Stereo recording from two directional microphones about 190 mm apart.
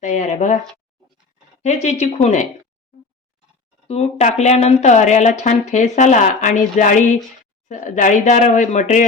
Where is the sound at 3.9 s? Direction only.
35° left (ahead or behind).